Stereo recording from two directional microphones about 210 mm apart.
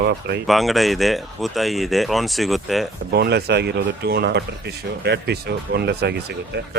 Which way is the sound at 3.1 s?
50° right (ahead or behind).